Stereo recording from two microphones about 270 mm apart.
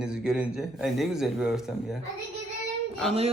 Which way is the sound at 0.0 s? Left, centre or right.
Centre.